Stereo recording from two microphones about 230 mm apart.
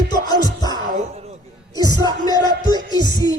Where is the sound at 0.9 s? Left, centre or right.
Right.